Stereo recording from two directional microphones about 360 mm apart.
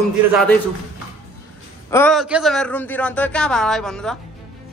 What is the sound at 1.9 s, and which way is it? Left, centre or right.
A man's voice, centre.